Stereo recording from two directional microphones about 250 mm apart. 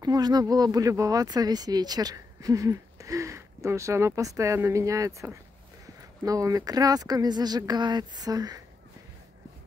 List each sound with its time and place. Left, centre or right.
0.0 s speech: centre